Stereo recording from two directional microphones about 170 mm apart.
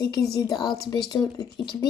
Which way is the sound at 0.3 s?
25° left (ahead or behind).